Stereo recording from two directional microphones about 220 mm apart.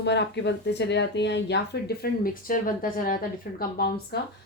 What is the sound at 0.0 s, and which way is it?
Speech, 50° left (ahead or behind).